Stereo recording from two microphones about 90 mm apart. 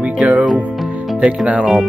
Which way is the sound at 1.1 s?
15° right (ahead or behind).